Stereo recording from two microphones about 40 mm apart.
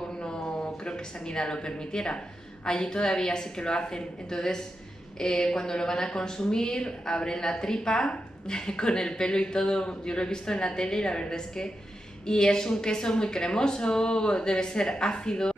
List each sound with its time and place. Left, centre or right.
0.2 s a woman's voice: left